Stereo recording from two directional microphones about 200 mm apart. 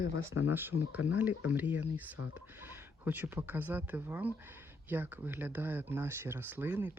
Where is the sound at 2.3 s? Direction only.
10° right (ahead or behind).